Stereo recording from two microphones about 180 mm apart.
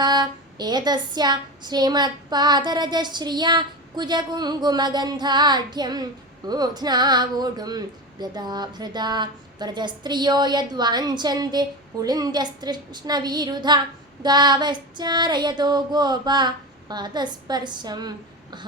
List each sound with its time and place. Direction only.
0.0 s speech: 25° right (ahead or behind)